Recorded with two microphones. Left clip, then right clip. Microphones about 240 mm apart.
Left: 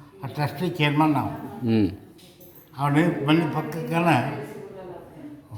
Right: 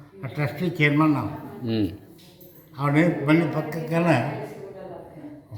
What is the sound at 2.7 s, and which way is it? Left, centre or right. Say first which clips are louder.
A man's voice: right 1 dB; centre.